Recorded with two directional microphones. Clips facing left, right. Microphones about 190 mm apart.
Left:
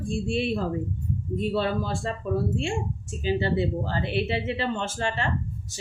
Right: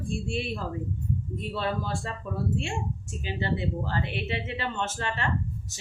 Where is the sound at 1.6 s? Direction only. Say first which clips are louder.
Left 3 dB; 30° left (ahead or behind).